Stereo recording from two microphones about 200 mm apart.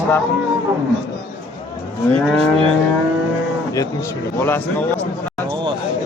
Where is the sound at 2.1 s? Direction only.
30° right (ahead or behind).